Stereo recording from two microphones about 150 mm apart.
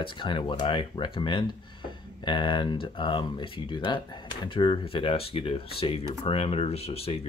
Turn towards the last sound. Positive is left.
turn(degrees=40)  # may be behind; listen again after turning